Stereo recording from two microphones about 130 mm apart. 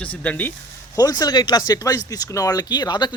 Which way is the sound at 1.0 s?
30° left (ahead or behind).